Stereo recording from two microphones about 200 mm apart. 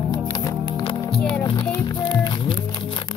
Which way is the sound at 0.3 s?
15° left (ahead or behind).